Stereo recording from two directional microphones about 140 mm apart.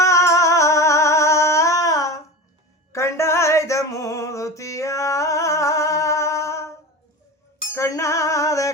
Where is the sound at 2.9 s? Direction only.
20° left (ahead or behind).